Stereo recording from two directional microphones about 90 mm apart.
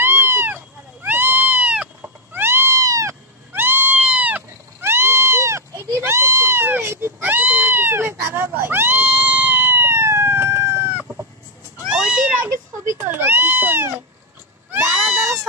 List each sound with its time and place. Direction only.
0.0 s cat: 25° right (ahead or behind)
3.5 s cat: 25° right (ahead or behind)
11.8 s cat: 10° right (ahead or behind)
12.9 s cat: 20° right (ahead or behind)